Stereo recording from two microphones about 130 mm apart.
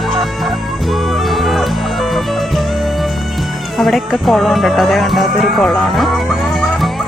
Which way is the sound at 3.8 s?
Centre (ahead or behind).